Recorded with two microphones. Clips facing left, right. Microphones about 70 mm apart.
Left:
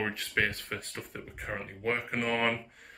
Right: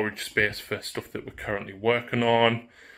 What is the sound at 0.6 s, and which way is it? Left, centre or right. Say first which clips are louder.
Speech: right 7 dB; right.